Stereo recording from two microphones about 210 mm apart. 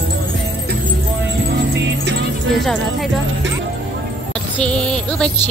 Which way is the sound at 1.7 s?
55° right (ahead or behind).